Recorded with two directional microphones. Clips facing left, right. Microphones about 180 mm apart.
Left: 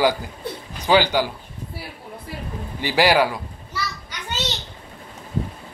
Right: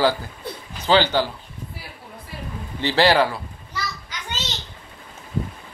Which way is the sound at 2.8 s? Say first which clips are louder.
Even; 10° left (ahead or behind).